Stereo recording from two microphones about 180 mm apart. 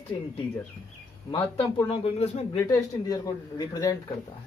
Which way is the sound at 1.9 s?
35° left (ahead or behind).